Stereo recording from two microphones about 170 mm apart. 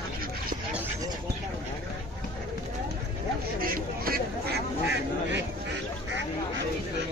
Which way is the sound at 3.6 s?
60° right (ahead or behind).